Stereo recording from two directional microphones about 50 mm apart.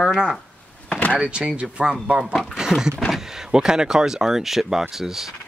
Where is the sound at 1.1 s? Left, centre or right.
Right.